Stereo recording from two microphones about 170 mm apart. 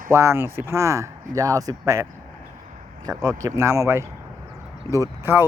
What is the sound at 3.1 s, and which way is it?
Speech, 20° right (ahead or behind).